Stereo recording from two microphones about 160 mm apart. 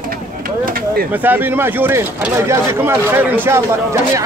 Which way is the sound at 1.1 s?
10° right (ahead or behind).